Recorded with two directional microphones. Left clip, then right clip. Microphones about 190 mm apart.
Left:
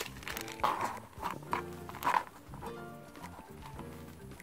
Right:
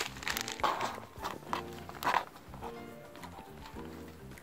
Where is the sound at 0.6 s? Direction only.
10° left (ahead or behind).